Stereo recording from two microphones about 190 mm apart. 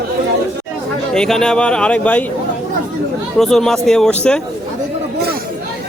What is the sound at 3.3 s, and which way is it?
A man's voice, centre (ahead or behind).